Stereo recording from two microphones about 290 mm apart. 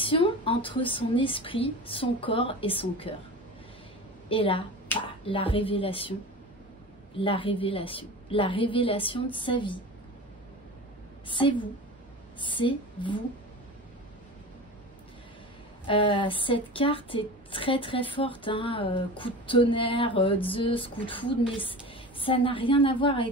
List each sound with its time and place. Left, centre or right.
0.0 s a woman's voice: centre
4.3 s a woman's voice: centre
7.2 s a woman's voice: centre
11.2 s a woman's voice: centre
15.9 s a woman's voice: centre